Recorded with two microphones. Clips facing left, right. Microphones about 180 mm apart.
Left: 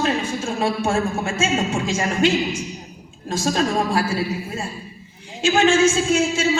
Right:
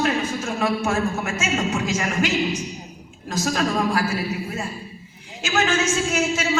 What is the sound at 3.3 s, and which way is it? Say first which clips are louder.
Speech: left 2 dB; 30° left (ahead or behind).